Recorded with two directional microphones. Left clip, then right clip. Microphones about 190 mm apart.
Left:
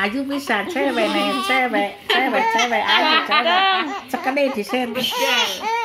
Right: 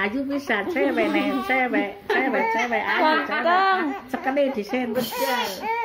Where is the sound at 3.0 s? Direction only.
10° right (ahead or behind).